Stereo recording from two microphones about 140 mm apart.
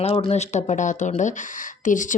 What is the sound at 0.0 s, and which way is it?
Speech, 45° left (ahead or behind).